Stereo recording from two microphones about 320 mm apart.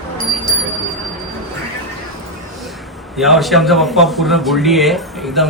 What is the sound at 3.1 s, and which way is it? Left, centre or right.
Speech, centre.